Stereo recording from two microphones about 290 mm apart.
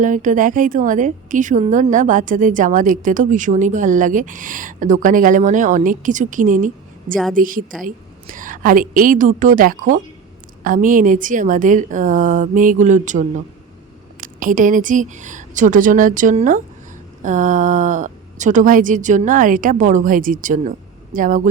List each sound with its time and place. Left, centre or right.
0.0 s a woman's voice: right